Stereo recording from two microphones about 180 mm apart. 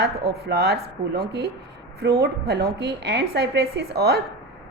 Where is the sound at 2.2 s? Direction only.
65° right (ahead or behind).